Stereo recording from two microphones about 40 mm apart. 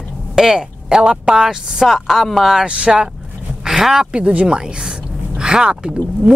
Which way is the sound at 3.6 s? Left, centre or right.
Centre.